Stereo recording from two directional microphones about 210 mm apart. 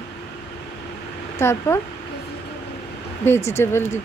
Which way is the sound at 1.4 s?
15° left (ahead or behind).